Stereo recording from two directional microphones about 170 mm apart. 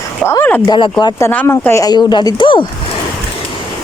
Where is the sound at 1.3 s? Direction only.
10° left (ahead or behind); by 2.6 s 30° left (ahead or behind).